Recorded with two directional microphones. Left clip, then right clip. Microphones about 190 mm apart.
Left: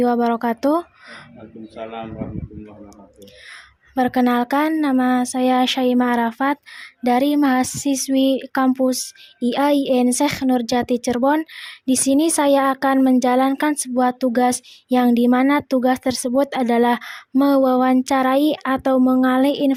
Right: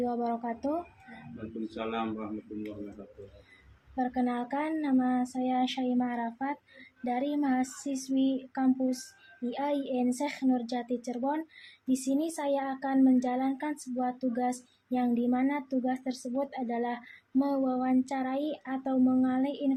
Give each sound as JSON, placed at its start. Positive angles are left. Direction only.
{"t": 0.0, "sound": "speech", "side_deg": 60}
{"t": 1.7, "sound": "a man's voice", "side_deg": 20}
{"t": 3.9, "sound": "speech", "side_deg": 65}